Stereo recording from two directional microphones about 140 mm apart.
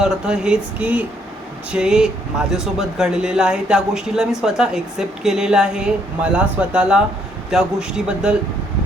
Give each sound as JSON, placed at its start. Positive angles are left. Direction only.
{"t": 0.0, "sound": "speech", "side_deg": -5}